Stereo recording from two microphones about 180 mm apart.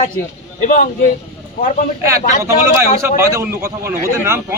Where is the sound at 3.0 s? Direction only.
15° right (ahead or behind).